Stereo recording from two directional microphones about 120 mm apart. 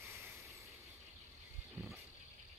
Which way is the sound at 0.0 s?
25° right (ahead or behind).